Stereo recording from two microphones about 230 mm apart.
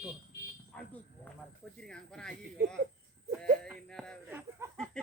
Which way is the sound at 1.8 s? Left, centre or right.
Centre.